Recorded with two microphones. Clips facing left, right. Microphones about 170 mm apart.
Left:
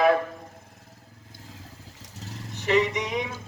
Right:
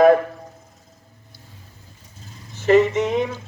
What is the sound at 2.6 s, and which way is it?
Speech, 45° right (ahead or behind).